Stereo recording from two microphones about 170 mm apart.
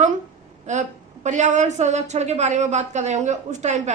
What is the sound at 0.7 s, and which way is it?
A woman's voice, 45° right (ahead or behind).